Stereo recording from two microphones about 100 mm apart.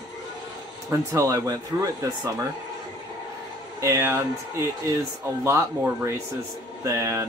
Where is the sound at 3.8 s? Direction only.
30° right (ahead or behind).